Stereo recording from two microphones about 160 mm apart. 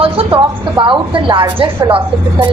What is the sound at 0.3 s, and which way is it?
A woman's voice, 30° right (ahead or behind).